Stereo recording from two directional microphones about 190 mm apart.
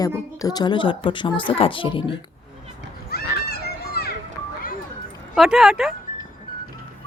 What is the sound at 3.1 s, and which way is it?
Children playing, 55° left (ahead or behind).